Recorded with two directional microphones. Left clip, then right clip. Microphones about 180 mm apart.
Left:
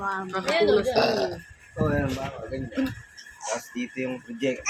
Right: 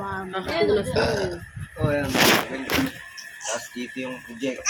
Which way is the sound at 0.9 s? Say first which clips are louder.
Left 1 dB; 40° left (ahead or behind).